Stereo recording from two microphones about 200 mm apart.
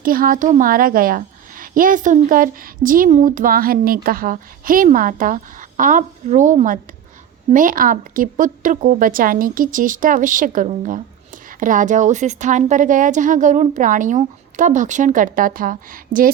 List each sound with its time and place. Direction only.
0.0 s a woman's voice: 45° right (ahead or behind)